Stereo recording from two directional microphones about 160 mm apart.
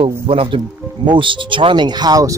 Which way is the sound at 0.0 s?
35° right (ahead or behind).